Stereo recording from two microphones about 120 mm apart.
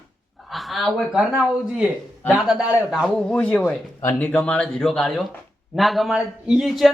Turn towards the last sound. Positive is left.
turn(degrees=0)  # may be behind; listen again after turning